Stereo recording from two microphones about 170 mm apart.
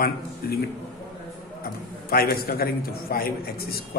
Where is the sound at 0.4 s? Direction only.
65° left (ahead or behind).